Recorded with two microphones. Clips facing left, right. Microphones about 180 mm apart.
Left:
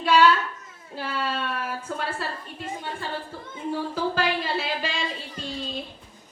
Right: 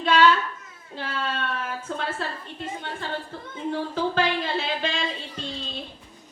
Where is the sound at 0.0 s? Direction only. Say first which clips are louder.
Left 1 dB; 10° left (ahead or behind).